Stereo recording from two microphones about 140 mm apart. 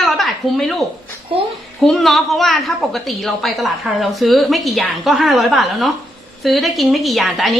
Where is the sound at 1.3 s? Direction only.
40° right (ahead or behind).